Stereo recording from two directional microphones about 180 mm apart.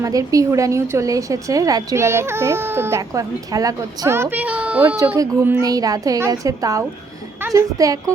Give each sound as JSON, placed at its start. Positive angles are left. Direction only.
{"t": 0.0, "sound": "a woman's voice", "side_deg": -20}